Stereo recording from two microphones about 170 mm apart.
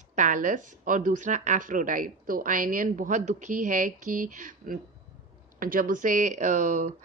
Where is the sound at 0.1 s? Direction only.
50° right (ahead or behind).